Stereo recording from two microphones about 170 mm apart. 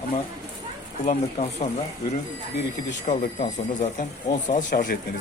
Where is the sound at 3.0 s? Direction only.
50° left (ahead or behind).